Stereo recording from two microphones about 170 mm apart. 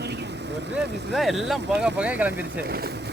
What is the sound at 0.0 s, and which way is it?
Vehicle, 85° right.